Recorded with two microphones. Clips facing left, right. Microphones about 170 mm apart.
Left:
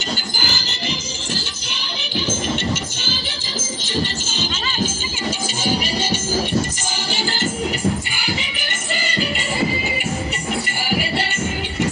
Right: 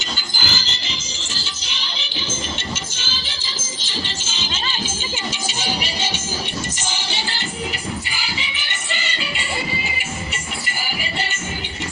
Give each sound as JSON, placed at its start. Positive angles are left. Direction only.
{"t": 0.3, "sound": "music", "side_deg": 55}
{"t": 5.6, "sound": "music", "side_deg": 45}